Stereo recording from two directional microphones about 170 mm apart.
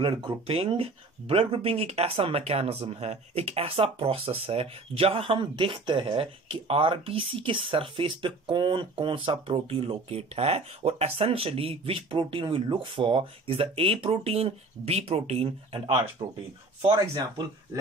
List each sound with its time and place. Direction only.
0.0 s speech: 35° right (ahead or behind)
16.8 s speech: 20° right (ahead or behind)